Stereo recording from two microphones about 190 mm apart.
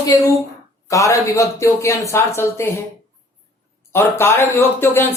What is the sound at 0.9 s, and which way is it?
Speech, 15° left (ahead or behind).